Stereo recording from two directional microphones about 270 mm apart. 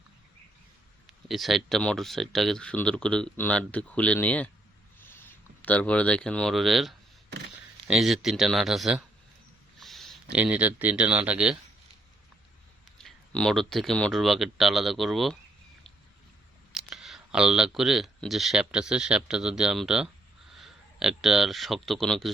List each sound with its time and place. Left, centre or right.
1.3 s speech: centre
7.3 s speech: right
7.9 s speech: centre
13.0 s speech: centre
16.7 s speech: centre